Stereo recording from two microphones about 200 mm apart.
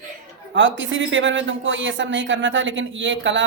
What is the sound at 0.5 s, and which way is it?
Speech, 70° right (ahead or behind).